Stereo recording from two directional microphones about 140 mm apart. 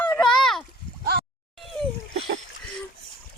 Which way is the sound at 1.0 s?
90° right.